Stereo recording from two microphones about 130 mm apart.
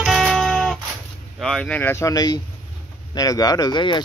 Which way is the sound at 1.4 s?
5° left (ahead or behind).